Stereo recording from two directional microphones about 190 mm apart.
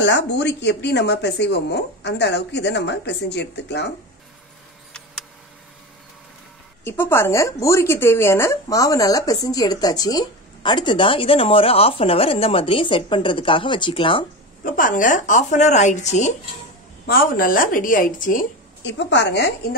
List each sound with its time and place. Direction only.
0.0 s speech: 65° left (ahead or behind)
6.8 s speech: 10° left (ahead or behind)
14.6 s speech: 45° left (ahead or behind)
17.0 s a woman's voice: 50° left (ahead or behind)
18.9 s a woman's voice: 70° left (ahead or behind)